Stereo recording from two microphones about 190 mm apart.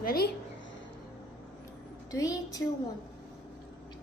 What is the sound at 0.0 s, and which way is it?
Speech, 55° left (ahead or behind).